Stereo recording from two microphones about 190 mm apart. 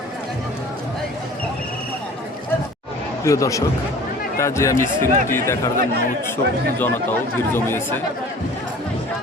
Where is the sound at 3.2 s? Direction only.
15° left (ahead or behind).